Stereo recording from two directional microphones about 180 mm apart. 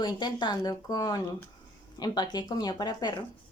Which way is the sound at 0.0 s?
25° left (ahead or behind).